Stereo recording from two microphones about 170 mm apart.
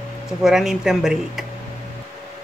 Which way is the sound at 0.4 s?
Centre (ahead or behind).